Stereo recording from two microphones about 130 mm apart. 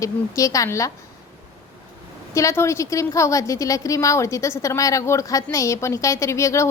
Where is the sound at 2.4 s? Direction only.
20° left (ahead or behind).